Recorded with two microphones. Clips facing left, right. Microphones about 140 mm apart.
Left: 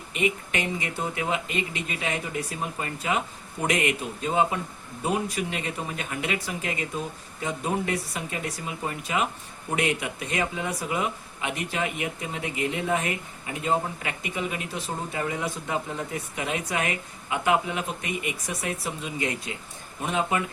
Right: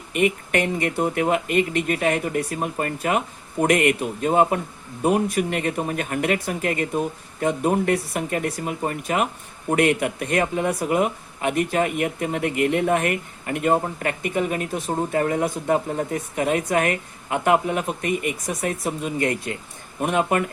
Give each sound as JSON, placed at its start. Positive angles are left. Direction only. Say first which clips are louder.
{"t": 0.1, "sound": "speech", "louder": "right 6 dB", "side_deg": -55}